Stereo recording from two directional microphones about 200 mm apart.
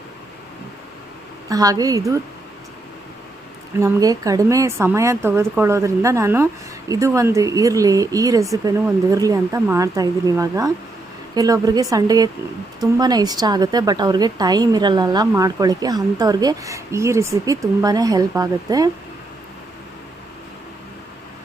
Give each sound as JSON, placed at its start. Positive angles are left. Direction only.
{"t": 1.5, "sound": "speech", "side_deg": -15}
{"t": 3.8, "sound": "a woman's voice", "side_deg": -15}